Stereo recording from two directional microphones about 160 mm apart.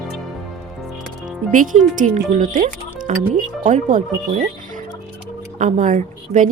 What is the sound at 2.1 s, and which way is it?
Speech, 55° right (ahead or behind).